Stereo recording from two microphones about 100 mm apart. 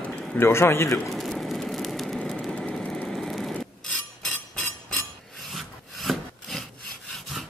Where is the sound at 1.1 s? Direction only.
Centre (ahead or behind).